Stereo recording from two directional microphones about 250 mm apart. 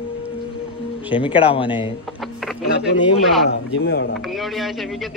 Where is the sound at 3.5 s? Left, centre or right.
Left.